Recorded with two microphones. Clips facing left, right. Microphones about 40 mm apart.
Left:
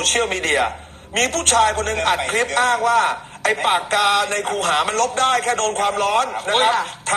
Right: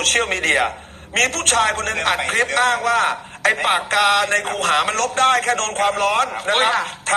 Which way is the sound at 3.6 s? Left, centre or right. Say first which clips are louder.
Left 1 dB; right.